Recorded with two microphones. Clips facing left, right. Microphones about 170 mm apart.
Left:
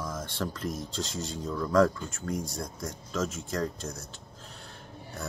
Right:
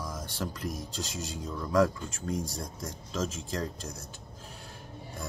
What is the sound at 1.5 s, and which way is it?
Speech, 20° right (ahead or behind).